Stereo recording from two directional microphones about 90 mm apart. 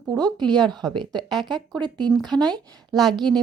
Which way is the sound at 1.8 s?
55° right (ahead or behind).